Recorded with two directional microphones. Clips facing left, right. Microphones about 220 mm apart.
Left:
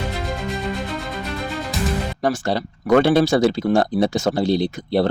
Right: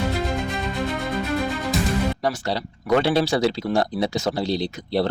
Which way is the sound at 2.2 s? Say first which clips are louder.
Left 4 dB; 50° left (ahead or behind).